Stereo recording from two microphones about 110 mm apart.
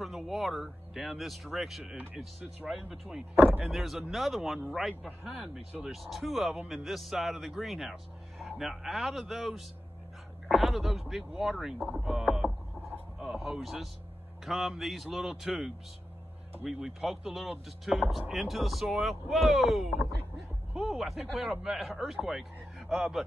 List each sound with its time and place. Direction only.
0.0 s speech: centre (ahead or behind)
2.0 s speech: 10° right (ahead or behind)
3.3 s speech: 15° right (ahead or behind)
3.6 s speech: centre (ahead or behind)